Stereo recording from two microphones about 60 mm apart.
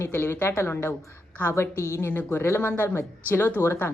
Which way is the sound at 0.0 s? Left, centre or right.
Left.